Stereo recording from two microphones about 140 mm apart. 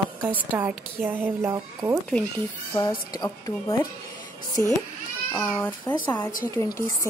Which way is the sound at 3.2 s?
20° left (ahead or behind).